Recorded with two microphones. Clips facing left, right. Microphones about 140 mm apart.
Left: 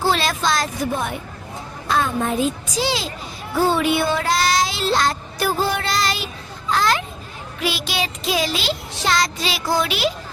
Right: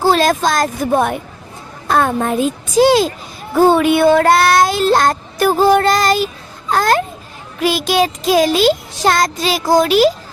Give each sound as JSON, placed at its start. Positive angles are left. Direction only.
{"t": 0.0, "sound": "speech", "side_deg": -45}